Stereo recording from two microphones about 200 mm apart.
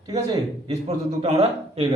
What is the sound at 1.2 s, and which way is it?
Speech, 30° right (ahead or behind).